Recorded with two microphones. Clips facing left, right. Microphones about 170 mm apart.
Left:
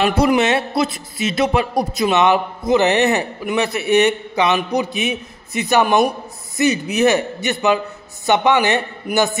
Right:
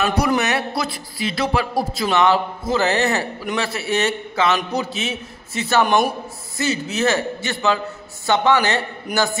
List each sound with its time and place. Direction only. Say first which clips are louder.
0.0 s a man's voice: left 4 dB; 25° left (ahead or behind)
5.9 s a man's voice: left 2 dB; centre (ahead or behind)
6.6 s a man's voice: left 5 dB; 15° left (ahead or behind)